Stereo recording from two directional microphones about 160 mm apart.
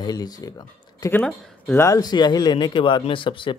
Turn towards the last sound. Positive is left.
turn(degrees=30)  # may be behind; listen again after turning